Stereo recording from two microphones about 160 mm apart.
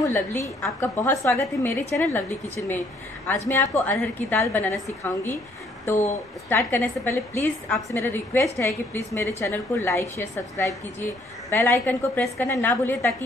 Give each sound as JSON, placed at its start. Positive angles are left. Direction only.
{"t": 0.0, "sound": "a woman's voice", "side_deg": 15}
{"t": 6.5, "sound": "a woman's voice", "side_deg": 15}